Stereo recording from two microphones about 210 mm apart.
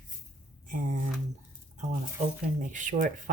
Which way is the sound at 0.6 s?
35° right (ahead or behind).